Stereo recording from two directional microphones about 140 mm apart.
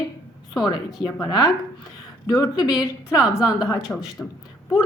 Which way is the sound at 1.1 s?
25° left (ahead or behind).